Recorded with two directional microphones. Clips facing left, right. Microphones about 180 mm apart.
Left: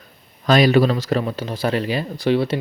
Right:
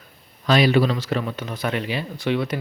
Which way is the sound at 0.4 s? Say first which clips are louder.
Left 3 dB; 45° left (ahead or behind).